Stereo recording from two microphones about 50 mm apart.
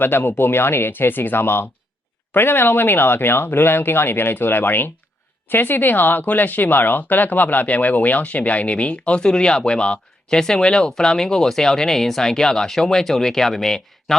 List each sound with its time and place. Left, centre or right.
0.0 s speech: left; by 14.2 s centre